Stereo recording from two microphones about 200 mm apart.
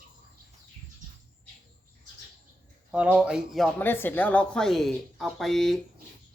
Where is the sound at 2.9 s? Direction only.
5° right (ahead or behind).